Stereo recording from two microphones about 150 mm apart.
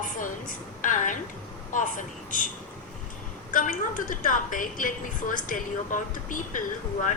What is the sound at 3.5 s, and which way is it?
A woman's voice, 60° left (ahead or behind).